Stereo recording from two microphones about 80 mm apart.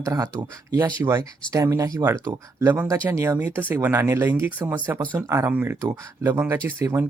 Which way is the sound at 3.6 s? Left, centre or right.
Right.